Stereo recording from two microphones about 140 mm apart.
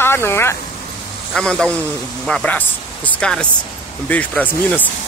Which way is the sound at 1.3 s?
5° left (ahead or behind).